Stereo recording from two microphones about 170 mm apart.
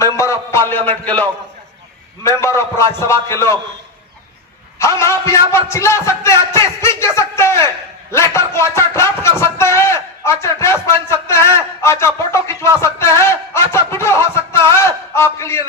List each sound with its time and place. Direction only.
0.0 s a sound: 15° left (ahead or behind)
0.9 s a man's voice: 10° left (ahead or behind)
4.8 s a man's voice: 15° left (ahead or behind)